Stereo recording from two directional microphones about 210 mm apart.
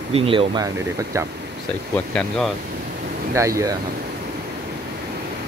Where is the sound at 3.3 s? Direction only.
15° right (ahead or behind).